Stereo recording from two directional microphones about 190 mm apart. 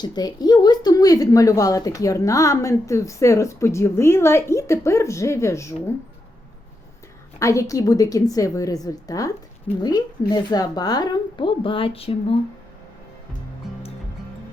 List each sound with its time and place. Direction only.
0.0 s a woman's voice: 20° left (ahead or behind)
7.3 s a woman's voice: 15° left (ahead or behind)